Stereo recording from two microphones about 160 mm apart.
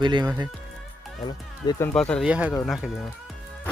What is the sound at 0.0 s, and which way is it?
Speech, 30° right (ahead or behind).